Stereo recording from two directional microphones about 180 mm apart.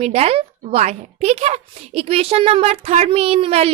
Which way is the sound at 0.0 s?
35° right (ahead or behind).